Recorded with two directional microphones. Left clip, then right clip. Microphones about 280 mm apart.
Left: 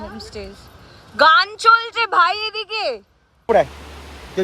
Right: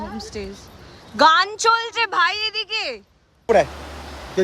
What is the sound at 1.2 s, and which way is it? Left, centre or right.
Speech, centre.